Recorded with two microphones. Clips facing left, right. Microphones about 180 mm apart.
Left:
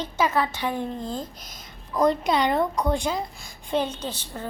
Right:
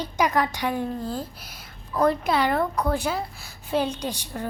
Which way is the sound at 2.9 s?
5° right (ahead or behind).